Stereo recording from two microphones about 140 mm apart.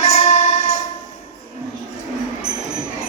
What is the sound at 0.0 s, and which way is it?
Music, 45° left (ahead or behind).